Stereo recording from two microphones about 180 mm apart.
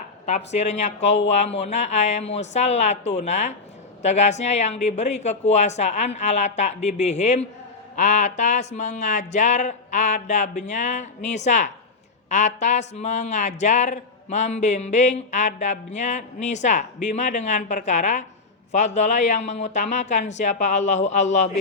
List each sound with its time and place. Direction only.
0.3 s speech: 40° left (ahead or behind)